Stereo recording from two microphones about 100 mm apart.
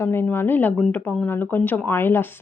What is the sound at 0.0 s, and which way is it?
Speech, 20° left (ahead or behind).